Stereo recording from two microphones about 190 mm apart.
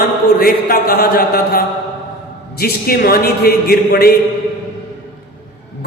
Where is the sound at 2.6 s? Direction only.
50° left (ahead or behind).